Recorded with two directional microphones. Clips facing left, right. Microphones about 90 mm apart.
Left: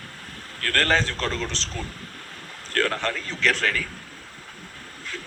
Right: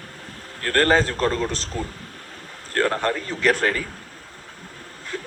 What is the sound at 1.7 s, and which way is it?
A man's voice, 25° right (ahead or behind).